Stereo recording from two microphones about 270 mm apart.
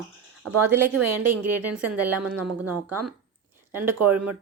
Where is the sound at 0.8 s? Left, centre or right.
Right.